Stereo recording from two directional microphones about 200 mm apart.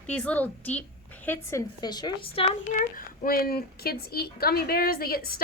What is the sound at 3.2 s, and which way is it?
A woman's voice, 50° left (ahead or behind).